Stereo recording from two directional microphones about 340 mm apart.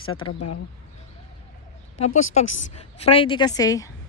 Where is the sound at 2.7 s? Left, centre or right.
Centre.